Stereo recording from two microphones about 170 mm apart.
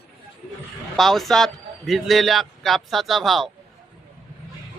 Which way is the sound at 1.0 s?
Centre (ahead or behind).